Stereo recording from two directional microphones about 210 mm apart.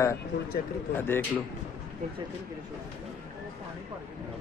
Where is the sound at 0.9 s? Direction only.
10° left (ahead or behind).